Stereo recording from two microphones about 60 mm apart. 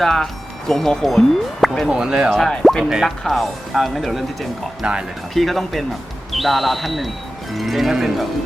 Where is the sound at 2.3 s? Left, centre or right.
Centre.